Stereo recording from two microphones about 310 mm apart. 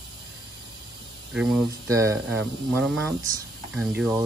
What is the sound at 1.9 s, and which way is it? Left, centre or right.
Speech, centre.